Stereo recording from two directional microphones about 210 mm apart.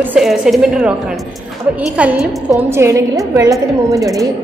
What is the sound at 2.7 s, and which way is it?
Speech, 15° right (ahead or behind).